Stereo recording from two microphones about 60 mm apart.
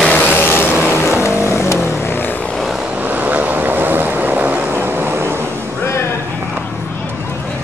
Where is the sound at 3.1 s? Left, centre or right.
Right.